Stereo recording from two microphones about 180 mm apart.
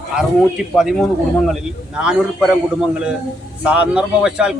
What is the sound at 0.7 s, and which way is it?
A man's voice, centre (ahead or behind).